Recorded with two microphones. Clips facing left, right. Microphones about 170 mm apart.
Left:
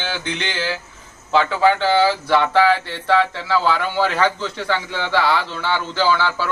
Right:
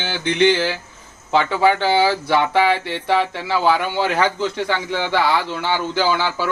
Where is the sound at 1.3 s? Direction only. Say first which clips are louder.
Even; 15° right (ahead or behind).